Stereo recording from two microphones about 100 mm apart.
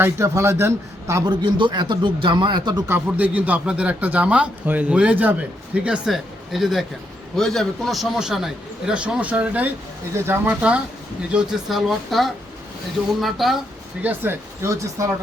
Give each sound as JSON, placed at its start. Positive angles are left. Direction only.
{"t": 0.0, "sound": "a man's voice", "side_deg": -30}
{"t": 1.2, "sound": "speech", "side_deg": -45}
{"t": 2.8, "sound": "a man's voice", "side_deg": -20}
{"t": 10.5, "sound": "speech", "side_deg": -10}
{"t": 11.7, "sound": "a man's voice", "side_deg": 0}
{"t": 14.0, "sound": "a man's voice", "side_deg": -20}